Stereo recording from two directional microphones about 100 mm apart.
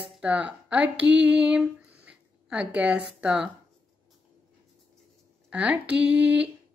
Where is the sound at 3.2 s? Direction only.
10° right (ahead or behind).